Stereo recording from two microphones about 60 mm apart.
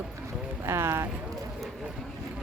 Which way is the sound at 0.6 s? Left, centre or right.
Right.